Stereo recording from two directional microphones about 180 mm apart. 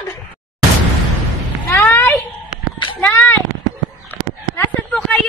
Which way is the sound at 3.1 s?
10° left (ahead or behind).